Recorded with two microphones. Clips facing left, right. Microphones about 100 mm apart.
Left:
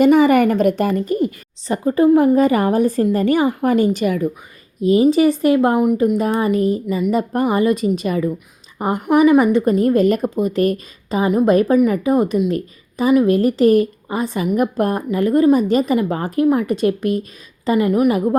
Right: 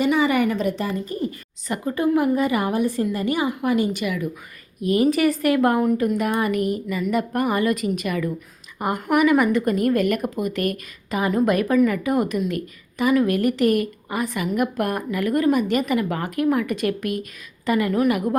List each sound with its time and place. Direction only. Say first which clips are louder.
0.0 s a woman's voice: left 7 dB; 45° left (ahead or behind)
1.6 s a woman's voice: left 8 dB; 30° left (ahead or behind)
4.8 s a woman's voice: left 6 dB; 25° left (ahead or behind)